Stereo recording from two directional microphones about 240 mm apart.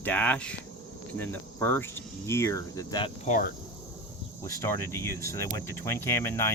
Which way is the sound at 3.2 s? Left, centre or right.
Left.